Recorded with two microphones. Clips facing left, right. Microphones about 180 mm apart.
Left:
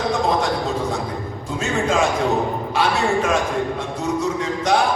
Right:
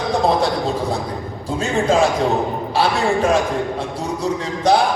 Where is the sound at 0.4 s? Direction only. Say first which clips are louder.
Right 2 dB; 35° right (ahead or behind).